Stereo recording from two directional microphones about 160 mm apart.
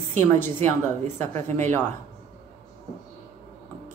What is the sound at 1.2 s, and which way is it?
Speech, 15° left (ahead or behind).